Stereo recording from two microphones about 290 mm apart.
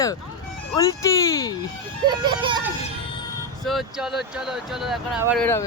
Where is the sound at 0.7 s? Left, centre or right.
Centre.